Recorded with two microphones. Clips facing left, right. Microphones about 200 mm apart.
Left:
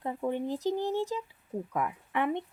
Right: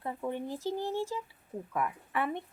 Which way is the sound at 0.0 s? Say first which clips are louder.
Left 4 dB; 15° left (ahead or behind).